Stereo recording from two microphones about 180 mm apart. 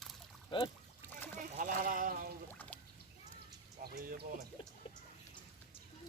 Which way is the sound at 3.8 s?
55° right (ahead or behind).